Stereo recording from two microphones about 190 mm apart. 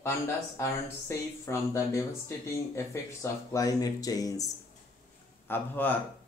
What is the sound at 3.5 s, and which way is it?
Speech, 20° left (ahead or behind).